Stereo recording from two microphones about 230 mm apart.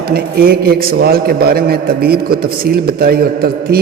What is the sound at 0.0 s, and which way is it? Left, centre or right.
A man's voice, right.